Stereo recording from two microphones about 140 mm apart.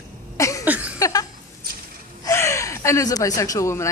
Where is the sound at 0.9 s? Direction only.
25° left (ahead or behind).